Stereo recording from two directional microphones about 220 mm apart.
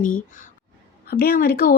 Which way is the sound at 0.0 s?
35° left (ahead or behind).